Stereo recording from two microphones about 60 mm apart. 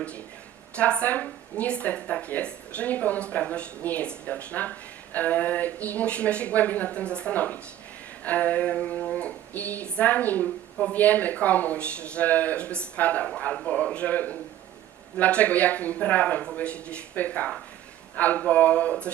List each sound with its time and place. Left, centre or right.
0.8 s speech: left